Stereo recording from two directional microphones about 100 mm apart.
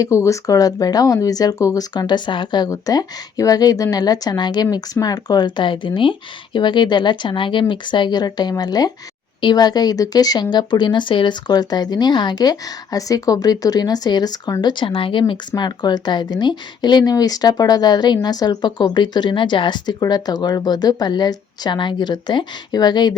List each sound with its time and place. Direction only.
0.0 s speech: 30° left (ahead or behind); by 15.2 s 60° left (ahead or behind)
15.3 s speech: 45° left (ahead or behind)